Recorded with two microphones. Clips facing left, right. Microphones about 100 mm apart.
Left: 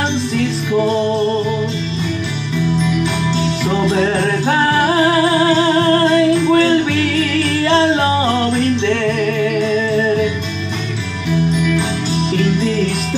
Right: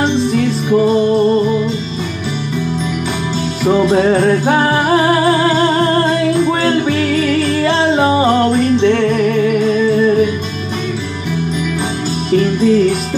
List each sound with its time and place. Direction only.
0.3 s music: 50° right (ahead or behind)
3.6 s music: 40° right (ahead or behind)
8.2 s music: 45° right (ahead or behind)